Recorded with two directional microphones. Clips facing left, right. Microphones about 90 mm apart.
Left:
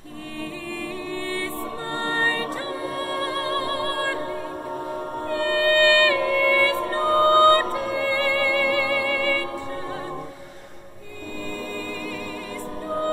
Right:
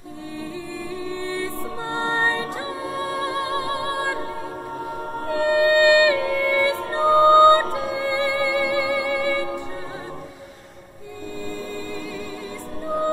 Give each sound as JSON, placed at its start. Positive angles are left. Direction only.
{"t": 1.0, "sound": "music", "side_deg": -20}
{"t": 5.3, "sound": "music", "side_deg": -20}